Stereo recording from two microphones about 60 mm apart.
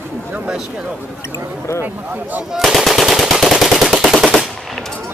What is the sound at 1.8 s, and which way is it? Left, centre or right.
Speech, right.